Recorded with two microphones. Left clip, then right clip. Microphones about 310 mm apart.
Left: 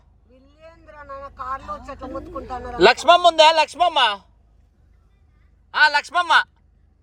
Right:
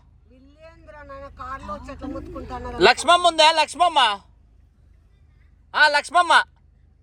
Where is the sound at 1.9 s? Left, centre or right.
Left.